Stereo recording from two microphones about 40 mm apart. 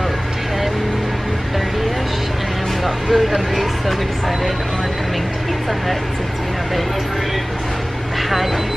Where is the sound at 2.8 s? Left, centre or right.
Centre.